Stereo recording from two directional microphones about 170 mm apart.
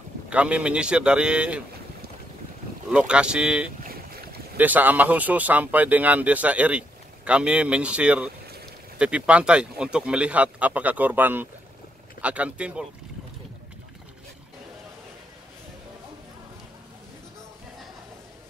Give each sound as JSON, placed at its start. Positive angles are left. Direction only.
{"t": 0.3, "sound": "speech", "side_deg": -5}
{"t": 2.9, "sound": "speech", "side_deg": -5}
{"t": 3.8, "sound": "boat", "side_deg": -60}
{"t": 4.6, "sound": "speech", "side_deg": -10}